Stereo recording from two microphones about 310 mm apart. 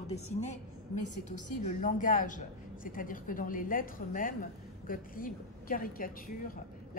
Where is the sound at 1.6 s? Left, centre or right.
Left.